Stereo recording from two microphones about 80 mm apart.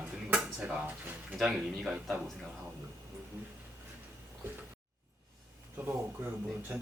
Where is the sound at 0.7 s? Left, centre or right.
Centre.